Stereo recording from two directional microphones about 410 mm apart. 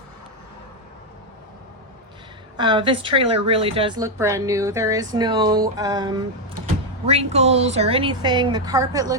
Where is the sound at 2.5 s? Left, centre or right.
Centre.